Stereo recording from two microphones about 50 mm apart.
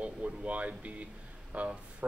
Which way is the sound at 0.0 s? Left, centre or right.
Right.